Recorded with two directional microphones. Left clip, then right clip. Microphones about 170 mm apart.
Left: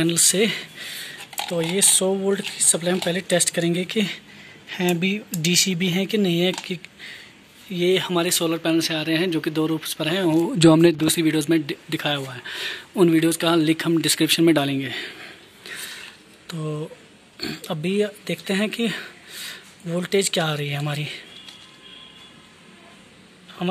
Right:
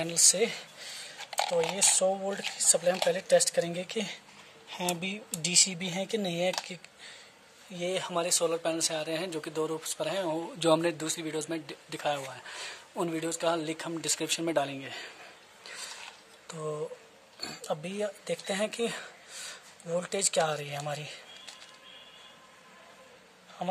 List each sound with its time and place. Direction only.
0.0 s speech: centre (ahead or behind)
10.4 s speech: 20° left (ahead or behind)
11.3 s speech: centre (ahead or behind)
15.6 s a sound: 10° right (ahead or behind)
16.5 s speech: centre (ahead or behind)
23.6 s speech: 10° right (ahead or behind)